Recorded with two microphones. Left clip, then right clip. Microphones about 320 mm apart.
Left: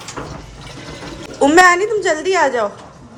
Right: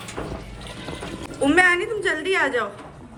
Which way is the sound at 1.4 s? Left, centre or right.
Left.